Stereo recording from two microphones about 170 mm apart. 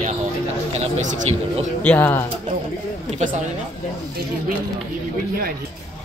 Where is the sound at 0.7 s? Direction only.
40° right (ahead or behind).